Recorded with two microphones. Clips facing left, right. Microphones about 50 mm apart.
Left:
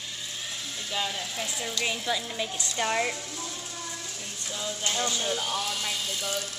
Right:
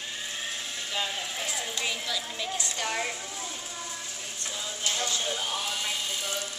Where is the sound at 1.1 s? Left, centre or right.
Right.